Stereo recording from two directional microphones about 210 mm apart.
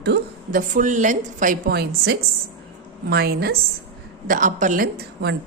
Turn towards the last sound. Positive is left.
turn(degrees=-50)  # may be behind; listen again after turning